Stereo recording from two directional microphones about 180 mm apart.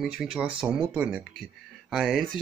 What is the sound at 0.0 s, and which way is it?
Speech, 5° right (ahead or behind).